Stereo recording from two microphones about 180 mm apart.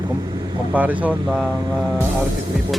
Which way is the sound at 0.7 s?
10° right (ahead or behind).